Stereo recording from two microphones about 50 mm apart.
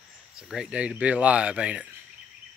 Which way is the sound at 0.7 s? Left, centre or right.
Right.